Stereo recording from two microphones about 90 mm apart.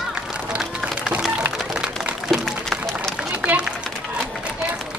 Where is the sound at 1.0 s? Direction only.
10° right (ahead or behind).